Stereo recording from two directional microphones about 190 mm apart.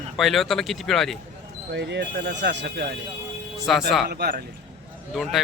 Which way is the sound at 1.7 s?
65° right (ahead or behind).